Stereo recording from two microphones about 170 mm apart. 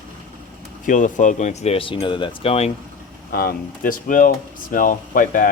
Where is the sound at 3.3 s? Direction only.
60° left (ahead or behind).